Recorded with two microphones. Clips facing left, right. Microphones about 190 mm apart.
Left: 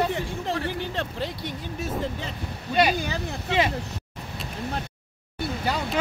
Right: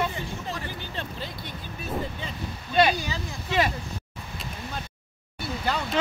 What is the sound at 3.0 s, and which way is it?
Speech, 60° left (ahead or behind).